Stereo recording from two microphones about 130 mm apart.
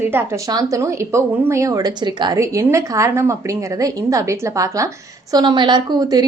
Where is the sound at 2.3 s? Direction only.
20° right (ahead or behind).